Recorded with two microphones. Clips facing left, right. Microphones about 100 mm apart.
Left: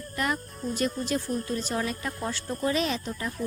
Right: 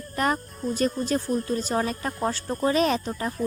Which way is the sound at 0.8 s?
40° right (ahead or behind).